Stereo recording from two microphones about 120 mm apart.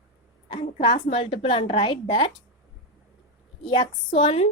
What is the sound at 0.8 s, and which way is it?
A woman's voice, 45° left (ahead or behind).